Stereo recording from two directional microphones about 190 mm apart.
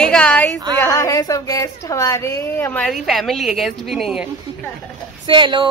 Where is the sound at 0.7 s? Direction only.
15° left (ahead or behind); by 4.3 s centre (ahead or behind).